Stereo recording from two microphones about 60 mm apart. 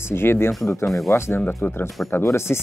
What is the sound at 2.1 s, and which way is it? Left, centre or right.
Speech, left.